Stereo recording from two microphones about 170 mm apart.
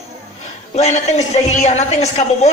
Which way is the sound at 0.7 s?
40° left (ahead or behind).